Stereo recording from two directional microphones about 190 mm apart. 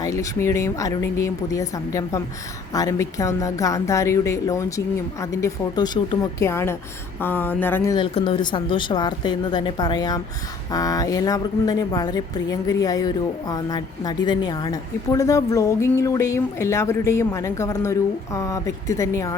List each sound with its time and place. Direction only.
0.0 s speech: 15° left (ahead or behind)
7.9 s speech: 25° left (ahead or behind)